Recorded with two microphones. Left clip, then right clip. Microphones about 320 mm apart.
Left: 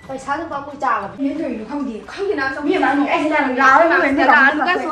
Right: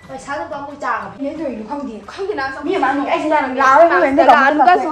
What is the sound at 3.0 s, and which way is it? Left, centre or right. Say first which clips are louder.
A woman's voice: right 1 dB; centre.